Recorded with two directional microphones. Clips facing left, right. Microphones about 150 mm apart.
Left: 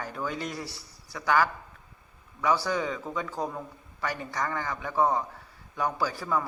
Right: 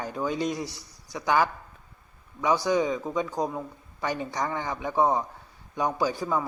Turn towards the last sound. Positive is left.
turn(degrees=-20)  # may be behind; listen again after turning